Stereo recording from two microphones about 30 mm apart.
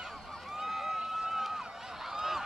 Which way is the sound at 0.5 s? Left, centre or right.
Centre.